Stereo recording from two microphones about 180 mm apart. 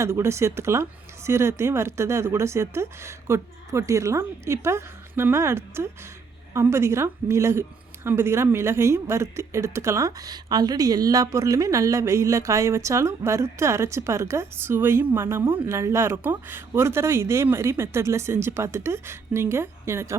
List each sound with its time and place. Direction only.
0.0 s a woman's voice: 15° right (ahead or behind)